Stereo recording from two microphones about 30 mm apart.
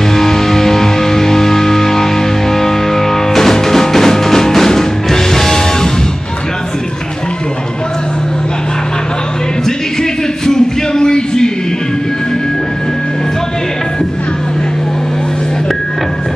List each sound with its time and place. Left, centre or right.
0.1 s music: centre
10.4 s music: left